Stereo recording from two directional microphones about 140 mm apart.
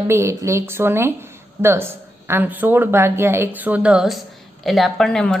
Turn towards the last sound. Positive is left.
turn(degrees=5)  # may be behind; listen again after turning